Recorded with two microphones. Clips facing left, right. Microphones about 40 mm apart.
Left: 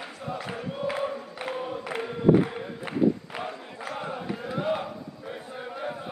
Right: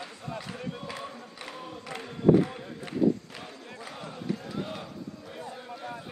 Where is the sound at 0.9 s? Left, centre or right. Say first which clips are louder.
Left 9 dB; left.